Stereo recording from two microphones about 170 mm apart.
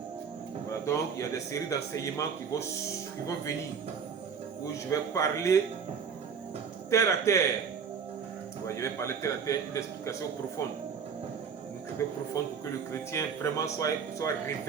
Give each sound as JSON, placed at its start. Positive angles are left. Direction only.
{"t": 0.9, "sound": "a man's voice", "side_deg": 20}
{"t": 4.6, "sound": "a man's voice", "side_deg": 15}
{"t": 6.9, "sound": "a man's voice", "side_deg": 15}
{"t": 8.6, "sound": "a man's voice", "side_deg": 15}
{"t": 12.0, "sound": "a man's voice", "side_deg": 15}